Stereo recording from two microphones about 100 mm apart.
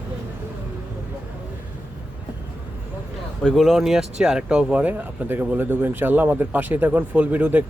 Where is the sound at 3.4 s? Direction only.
Centre (ahead or behind).